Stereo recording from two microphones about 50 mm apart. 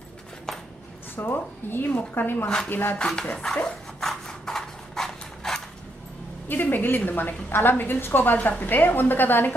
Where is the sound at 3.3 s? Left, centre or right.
Centre.